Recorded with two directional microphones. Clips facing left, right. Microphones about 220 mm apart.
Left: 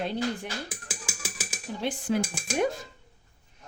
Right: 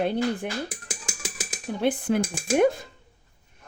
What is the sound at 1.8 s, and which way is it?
Speech, 55° right (ahead or behind).